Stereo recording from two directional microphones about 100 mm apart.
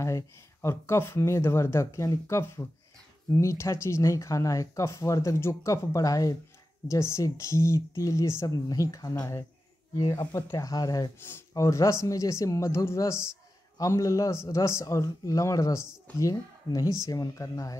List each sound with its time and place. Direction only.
0.0 s a man's voice: 30° left (ahead or behind)
11.2 s a man's voice: 25° left (ahead or behind)